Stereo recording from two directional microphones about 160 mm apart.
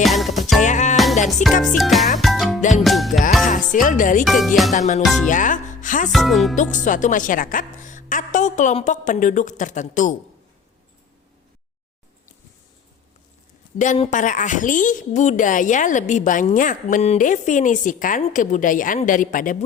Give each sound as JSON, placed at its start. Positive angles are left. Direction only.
{"t": 0.0, "sound": "music", "side_deg": 0}
{"t": 0.6, "sound": "music", "side_deg": 50}
{"t": 1.6, "sound": "speech", "side_deg": 0}
{"t": 2.1, "sound": "music", "side_deg": 0}
{"t": 2.6, "sound": "music", "side_deg": 50}
{"t": 2.8, "sound": "music", "side_deg": 0}
{"t": 3.4, "sound": "speech", "side_deg": 55}
{"t": 4.3, "sound": "speech", "side_deg": 0}
{"t": 4.7, "sound": "a woman's voice", "side_deg": 50}
{"t": 5.0, "sound": "speech", "side_deg": 0}
{"t": 5.3, "sound": "speech", "side_deg": 55}
{"t": 6.1, "sound": "speech", "side_deg": 0}
{"t": 6.8, "sound": "a woman's voice", "side_deg": 55}
{"t": 13.7, "sound": "a woman's voice", "side_deg": 50}